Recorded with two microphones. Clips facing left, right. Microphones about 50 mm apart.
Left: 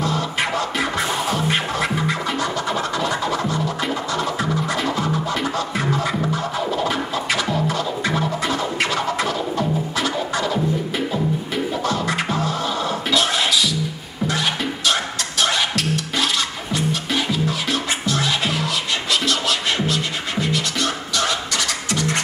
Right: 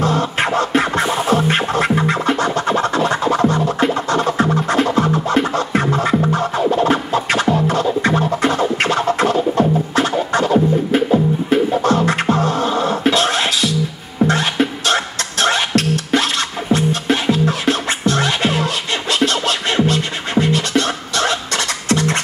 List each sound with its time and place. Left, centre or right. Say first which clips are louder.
0.0 s music: right 5 dB; right